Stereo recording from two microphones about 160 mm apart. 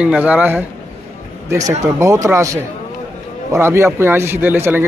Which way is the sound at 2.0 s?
20° right (ahead or behind).